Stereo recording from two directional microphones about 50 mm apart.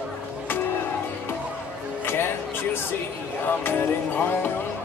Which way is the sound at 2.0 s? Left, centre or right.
Left.